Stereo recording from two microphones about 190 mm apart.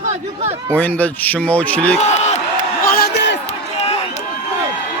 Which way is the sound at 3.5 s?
35° left (ahead or behind).